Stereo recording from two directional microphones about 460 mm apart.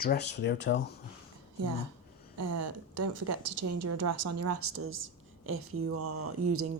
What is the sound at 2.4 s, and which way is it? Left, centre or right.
A woman's voice, right.